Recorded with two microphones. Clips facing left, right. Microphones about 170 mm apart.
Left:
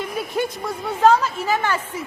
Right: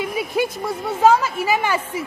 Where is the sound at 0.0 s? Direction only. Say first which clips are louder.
Right 2 dB; 10° right (ahead or behind).